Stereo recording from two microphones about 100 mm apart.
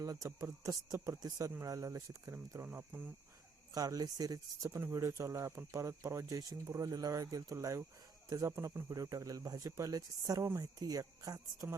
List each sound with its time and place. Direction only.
0.0 s speech: 35° right (ahead or behind)
0.3 s speech: 25° right (ahead or behind)
2.6 s speech: 20° right (ahead or behind)
3.8 s speech: 40° right (ahead or behind)